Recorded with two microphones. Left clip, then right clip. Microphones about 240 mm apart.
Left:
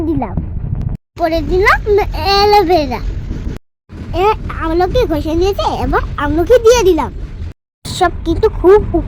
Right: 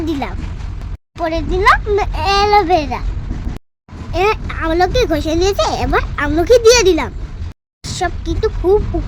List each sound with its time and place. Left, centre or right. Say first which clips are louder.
0.0 s a sound: left 3 dB; centre
1.2 s a child's voice: left 2 dB; centre
4.1 s speech: left 2 dB; centre
7.9 s speech: left 6 dB; centre